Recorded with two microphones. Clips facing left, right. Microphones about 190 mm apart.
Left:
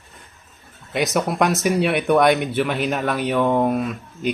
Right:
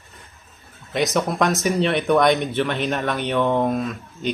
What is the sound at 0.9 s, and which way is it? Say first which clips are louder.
Speech: even; 5° left (ahead or behind).